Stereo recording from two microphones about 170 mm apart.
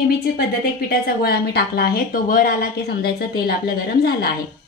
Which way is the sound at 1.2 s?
65° left (ahead or behind).